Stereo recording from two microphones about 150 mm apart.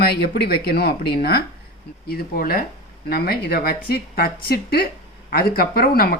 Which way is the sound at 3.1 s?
90° left.